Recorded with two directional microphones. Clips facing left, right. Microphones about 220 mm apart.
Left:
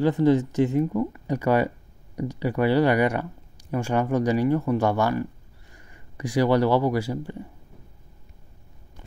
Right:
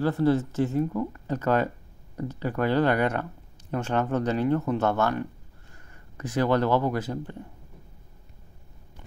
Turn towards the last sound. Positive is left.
turn(degrees=10)  # may be behind; listen again after turning